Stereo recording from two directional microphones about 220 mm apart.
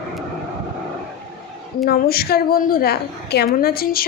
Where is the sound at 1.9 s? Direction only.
45° left (ahead or behind).